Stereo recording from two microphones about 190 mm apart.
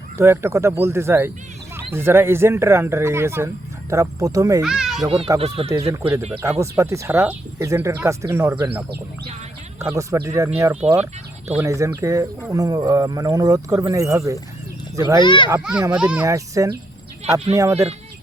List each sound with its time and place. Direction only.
0.2 s speech: 15° right (ahead or behind)
4.6 s a child's voice: 5° right (ahead or behind)
5.0 s a child's voice: 30° right (ahead or behind)
5.7 s speech: 15° right (ahead or behind)
9.9 s speech: 15° right (ahead or behind)
15.2 s a child's voice: 25° left (ahead or behind)
15.4 s speech: 10° right (ahead or behind)
16.2 s speech: 15° right (ahead or behind)